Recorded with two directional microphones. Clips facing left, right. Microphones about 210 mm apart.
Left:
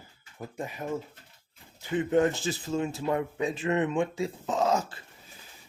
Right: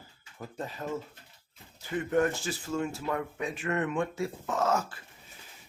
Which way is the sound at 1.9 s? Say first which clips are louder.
Left 3 dB; 20° left (ahead or behind).